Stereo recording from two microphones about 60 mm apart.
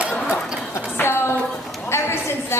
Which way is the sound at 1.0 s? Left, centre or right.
Left.